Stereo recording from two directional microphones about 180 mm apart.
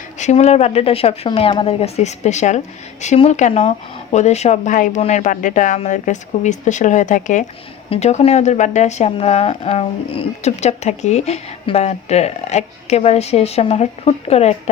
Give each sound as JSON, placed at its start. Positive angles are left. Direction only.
{"t": 0.2, "sound": "speech", "side_deg": 40}